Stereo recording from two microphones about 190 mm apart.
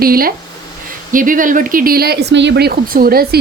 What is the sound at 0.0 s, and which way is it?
A woman's voice, 50° right (ahead or behind).